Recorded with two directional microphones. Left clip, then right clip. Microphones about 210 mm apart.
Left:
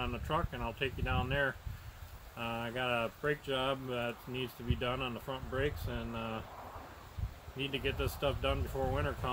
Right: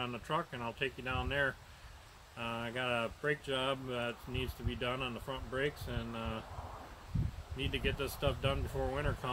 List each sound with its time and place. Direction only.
0.0 s speech: 5° left (ahead or behind)
7.5 s speech: 10° left (ahead or behind)